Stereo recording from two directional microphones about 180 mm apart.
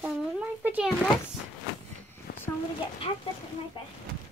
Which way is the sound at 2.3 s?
55° left (ahead or behind).